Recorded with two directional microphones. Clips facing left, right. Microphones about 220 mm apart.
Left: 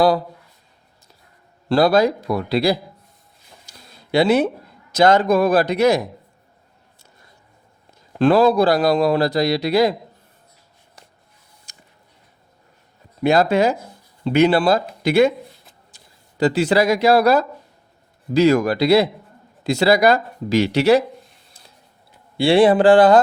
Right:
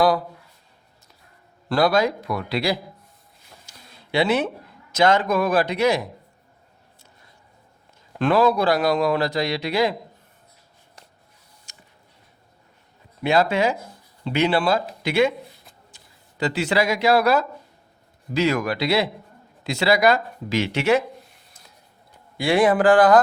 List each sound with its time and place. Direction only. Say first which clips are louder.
1.7 s a man's voice: left 4 dB; 35° left (ahead or behind)
8.2 s a man's voice: left 5 dB; 30° left (ahead or behind)
13.2 s a man's voice: left 4 dB; 40° left (ahead or behind)
16.4 s a man's voice: left 5 dB; 35° left (ahead or behind)
22.4 s speech: left 5 dB; 30° left (ahead or behind)